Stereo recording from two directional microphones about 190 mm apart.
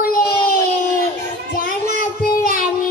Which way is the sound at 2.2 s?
50° left (ahead or behind).